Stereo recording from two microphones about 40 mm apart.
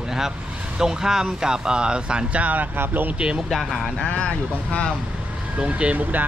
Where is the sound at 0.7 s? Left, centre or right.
Centre.